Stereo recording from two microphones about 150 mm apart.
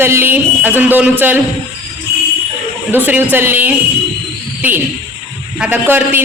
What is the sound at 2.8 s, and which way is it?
Speech, 10° right (ahead or behind).